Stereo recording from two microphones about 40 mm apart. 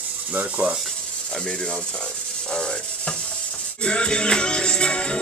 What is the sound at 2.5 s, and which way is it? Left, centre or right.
Music, left.